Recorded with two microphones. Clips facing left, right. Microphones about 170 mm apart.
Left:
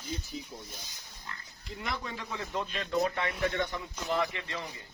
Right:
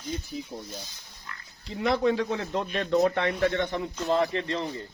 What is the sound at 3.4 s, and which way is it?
Speech, 30° right (ahead or behind).